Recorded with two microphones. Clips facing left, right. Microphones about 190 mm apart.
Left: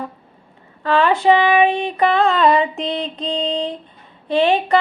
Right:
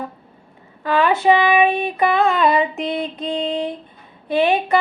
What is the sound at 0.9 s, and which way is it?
Music, 15° right (ahead or behind).